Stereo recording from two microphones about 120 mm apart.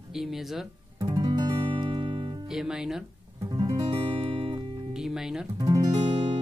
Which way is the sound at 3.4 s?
30° right (ahead or behind).